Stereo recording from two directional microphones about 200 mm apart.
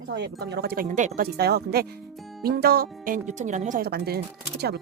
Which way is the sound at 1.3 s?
50° right (ahead or behind).